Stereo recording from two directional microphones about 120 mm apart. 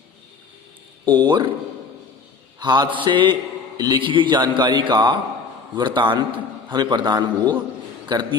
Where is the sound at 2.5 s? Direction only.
35° right (ahead or behind).